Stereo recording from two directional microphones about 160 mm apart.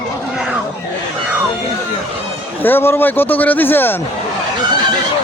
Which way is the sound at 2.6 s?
15° left (ahead or behind).